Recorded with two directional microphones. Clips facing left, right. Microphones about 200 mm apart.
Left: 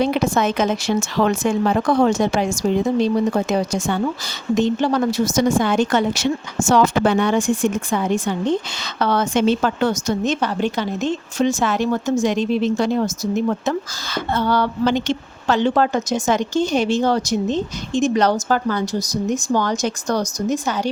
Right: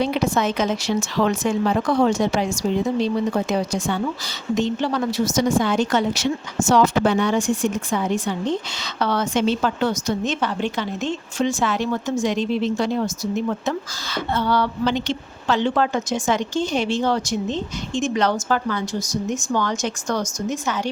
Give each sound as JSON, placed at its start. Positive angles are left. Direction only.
{"t": 0.0, "sound": "a woman's voice", "side_deg": 50}